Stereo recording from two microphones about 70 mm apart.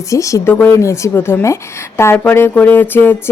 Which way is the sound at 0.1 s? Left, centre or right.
Left.